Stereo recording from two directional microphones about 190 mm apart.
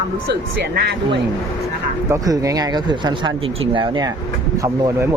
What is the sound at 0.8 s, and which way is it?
Speech, 60° right (ahead or behind).